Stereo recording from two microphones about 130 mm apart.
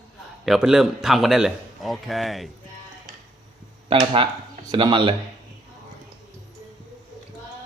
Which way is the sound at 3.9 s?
45° right (ahead or behind).